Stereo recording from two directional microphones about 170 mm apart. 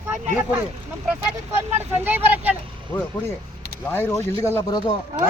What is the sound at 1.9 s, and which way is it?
Speech, 10° right (ahead or behind).